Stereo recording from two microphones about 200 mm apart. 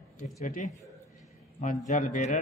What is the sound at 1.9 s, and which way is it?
Speech, 40° left (ahead or behind).